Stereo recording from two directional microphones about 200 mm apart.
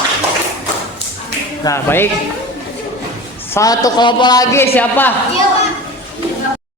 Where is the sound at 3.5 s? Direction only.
15° left (ahead or behind).